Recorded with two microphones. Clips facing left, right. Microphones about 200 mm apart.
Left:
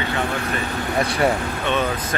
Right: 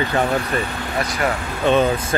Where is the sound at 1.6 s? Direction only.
35° right (ahead or behind).